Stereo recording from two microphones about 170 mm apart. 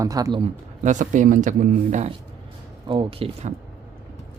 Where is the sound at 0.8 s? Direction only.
45° right (ahead or behind).